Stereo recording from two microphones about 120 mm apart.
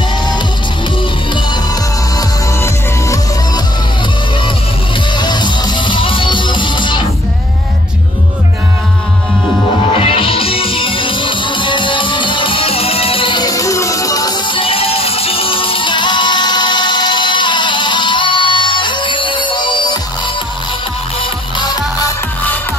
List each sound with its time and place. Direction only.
2.1 s music: 30° left (ahead or behind)
5.1 s music: 40° left (ahead or behind)
9.9 s music: 50° left (ahead or behind)
13.5 s music: 25° left (ahead or behind)